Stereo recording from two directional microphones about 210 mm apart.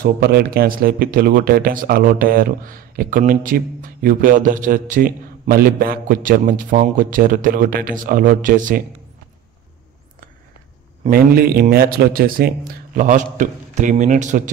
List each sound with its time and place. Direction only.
0.0 s speech: 50° right (ahead or behind)
11.1 s speech: 45° right (ahead or behind)